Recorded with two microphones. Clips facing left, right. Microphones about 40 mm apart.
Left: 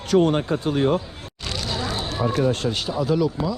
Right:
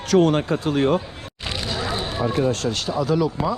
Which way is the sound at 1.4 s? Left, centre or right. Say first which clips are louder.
Right 1 dB; centre.